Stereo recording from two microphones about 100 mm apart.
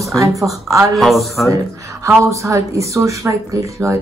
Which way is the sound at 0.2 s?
30° right (ahead or behind).